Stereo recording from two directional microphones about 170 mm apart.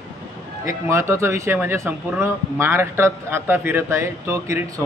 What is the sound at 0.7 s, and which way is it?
Speech, 15° right (ahead or behind).